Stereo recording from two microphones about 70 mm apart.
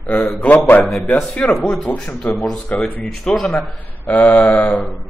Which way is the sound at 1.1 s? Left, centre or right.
Centre.